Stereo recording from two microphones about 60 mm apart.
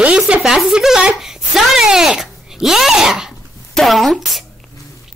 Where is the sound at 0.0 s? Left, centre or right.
Centre.